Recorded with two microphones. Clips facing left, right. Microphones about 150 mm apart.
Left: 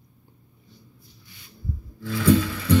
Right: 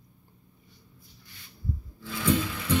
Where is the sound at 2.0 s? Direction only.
55° left (ahead or behind).